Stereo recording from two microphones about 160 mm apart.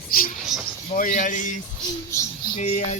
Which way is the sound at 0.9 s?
55° left (ahead or behind).